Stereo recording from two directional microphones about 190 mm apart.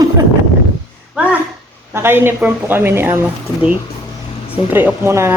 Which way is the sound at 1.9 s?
10° right (ahead or behind).